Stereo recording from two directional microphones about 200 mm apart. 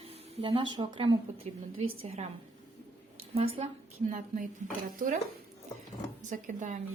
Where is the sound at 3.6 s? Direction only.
35° right (ahead or behind).